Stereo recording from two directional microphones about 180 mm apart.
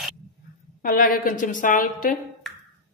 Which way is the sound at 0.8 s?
55° left (ahead or behind).